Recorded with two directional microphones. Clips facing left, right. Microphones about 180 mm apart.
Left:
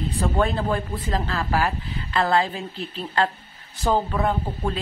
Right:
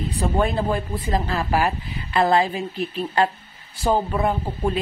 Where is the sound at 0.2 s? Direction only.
15° right (ahead or behind).